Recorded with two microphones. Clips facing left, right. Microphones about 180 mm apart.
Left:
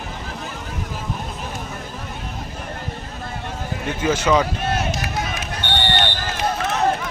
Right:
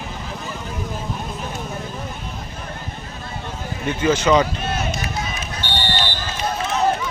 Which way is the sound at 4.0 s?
10° left (ahead or behind).